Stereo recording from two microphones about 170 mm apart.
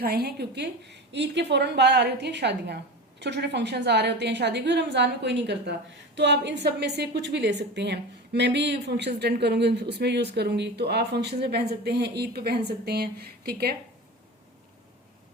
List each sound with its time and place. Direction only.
0.0 s a woman's voice: 65° right (ahead or behind); by 6.6 s 90° right
6.7 s a woman's voice: 75° right (ahead or behind)